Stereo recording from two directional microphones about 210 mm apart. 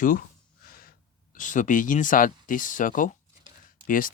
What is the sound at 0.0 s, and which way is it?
Speech, 40° left (ahead or behind).